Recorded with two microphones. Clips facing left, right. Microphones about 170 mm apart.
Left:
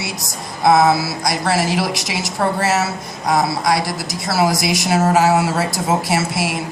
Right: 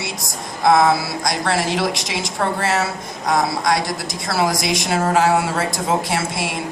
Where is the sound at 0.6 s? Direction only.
5° left (ahead or behind).